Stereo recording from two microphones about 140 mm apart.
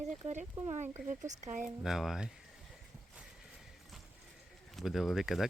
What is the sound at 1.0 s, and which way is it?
Speech, 60° right (ahead or behind).